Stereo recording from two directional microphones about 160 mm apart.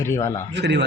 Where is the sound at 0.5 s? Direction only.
90° right.